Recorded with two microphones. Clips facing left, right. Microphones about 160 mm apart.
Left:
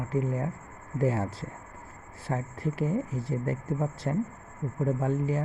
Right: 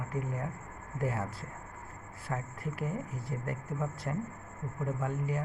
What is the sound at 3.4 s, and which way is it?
Speech, 30° left (ahead or behind).